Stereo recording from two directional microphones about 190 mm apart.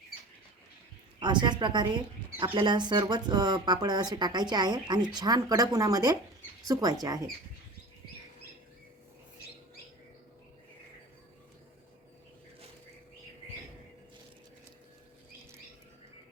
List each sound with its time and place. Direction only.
1.2 s speech: 25° right (ahead or behind)